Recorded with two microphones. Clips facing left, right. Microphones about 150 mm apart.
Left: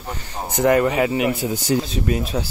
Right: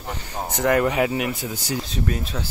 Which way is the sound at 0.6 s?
5° left (ahead or behind).